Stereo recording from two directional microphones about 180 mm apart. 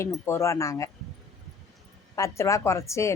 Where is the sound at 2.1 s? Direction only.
15° left (ahead or behind).